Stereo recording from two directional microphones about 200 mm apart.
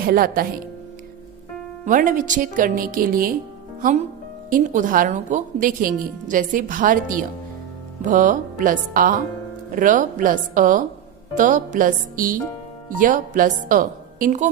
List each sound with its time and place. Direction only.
0.0 s a woman's voice: 45° right (ahead or behind)
1.8 s a woman's voice: 40° right (ahead or behind)
4.4 s a woman's voice: 40° right (ahead or behind)